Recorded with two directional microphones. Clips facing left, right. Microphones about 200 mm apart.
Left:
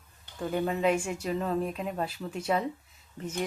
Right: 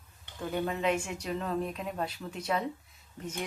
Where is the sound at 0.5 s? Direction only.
5° left (ahead or behind).